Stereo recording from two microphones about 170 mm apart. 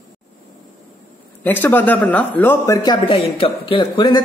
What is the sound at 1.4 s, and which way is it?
A man's voice, 10° left (ahead or behind).